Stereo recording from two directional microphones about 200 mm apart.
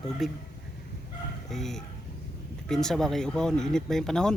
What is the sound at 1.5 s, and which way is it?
Speech, centre (ahead or behind).